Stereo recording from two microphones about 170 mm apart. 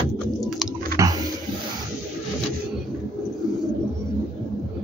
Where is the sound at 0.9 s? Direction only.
20° right (ahead or behind).